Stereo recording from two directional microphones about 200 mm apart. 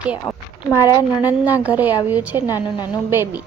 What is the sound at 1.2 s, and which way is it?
A woman's voice, 10° right (ahead or behind).